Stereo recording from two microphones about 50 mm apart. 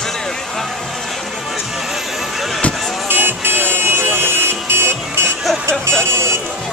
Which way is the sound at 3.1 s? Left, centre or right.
Right.